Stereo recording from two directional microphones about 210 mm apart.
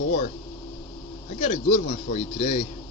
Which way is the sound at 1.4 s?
35° left (ahead or behind).